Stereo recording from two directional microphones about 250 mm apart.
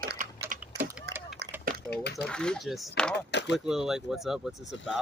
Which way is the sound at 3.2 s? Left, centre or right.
Left.